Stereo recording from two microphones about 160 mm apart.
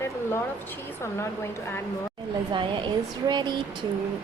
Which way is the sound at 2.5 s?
30° right (ahead or behind).